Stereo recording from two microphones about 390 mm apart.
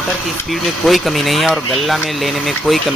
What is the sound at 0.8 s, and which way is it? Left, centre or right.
Speech, centre.